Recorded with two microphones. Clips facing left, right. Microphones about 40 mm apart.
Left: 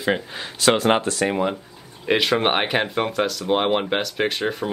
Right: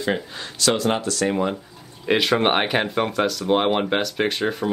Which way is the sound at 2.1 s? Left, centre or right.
Centre.